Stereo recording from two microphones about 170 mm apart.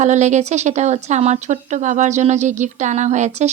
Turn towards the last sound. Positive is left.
turn(degrees=-40)  # may be behind; listen again after turning